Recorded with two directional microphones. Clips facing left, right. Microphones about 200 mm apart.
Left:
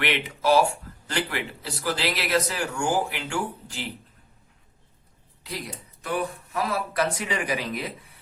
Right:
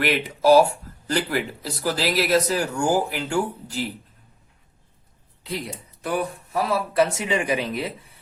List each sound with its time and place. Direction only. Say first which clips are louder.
0.0 s speech: right 5 dB; 40° right (ahead or behind)
5.5 s speech: right 5 dB; 25° right (ahead or behind)